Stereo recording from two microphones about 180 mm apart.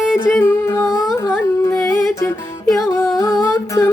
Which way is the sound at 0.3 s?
15° left (ahead or behind).